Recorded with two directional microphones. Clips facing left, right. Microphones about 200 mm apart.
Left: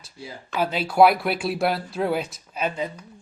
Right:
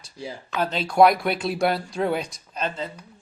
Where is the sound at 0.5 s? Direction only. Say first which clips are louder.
Even; 10° left (ahead or behind).